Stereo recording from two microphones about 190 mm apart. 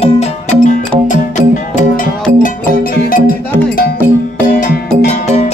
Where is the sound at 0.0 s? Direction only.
40° left (ahead or behind).